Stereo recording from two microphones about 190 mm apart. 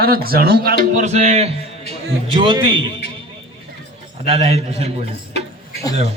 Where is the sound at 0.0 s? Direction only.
50° right (ahead or behind).